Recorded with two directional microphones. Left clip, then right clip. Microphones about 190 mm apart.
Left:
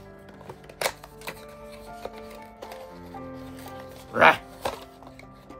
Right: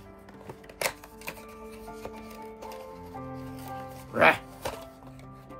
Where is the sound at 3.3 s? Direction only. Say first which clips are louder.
Even; 50° left (ahead or behind).